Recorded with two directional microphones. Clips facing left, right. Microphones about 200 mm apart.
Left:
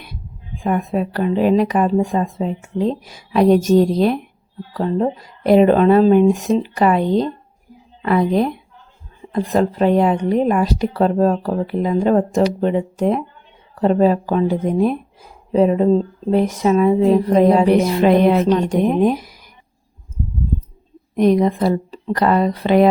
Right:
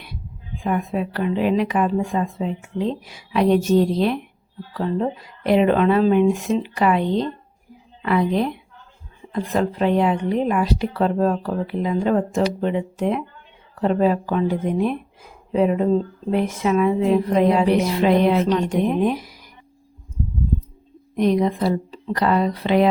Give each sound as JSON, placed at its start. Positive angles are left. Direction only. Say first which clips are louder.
{"t": 0.6, "sound": "a woman's voice", "louder": "left 3 dB", "side_deg": 45}
{"t": 21.2, "sound": "speech", "louder": "left 4 dB", "side_deg": 50}